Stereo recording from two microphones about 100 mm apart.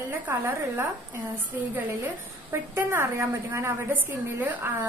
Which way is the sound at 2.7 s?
25° right (ahead or behind).